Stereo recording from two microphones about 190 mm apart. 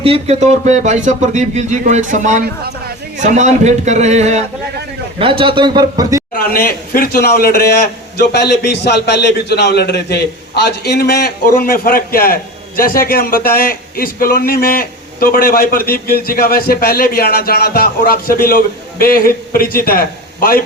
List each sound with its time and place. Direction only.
0.0 s a man's voice: 30° right (ahead or behind)
6.5 s a man's voice: 50° left (ahead or behind)